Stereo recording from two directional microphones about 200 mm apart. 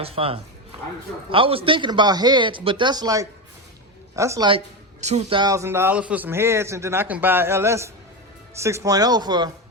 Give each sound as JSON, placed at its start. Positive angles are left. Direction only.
{"t": 0.0, "sound": "a man's voice", "side_deg": -30}
{"t": 4.9, "sound": "speech", "side_deg": -35}
{"t": 5.4, "sound": "a man's voice", "side_deg": -15}